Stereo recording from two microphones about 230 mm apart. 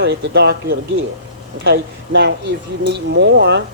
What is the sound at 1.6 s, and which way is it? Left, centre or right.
Speech, right.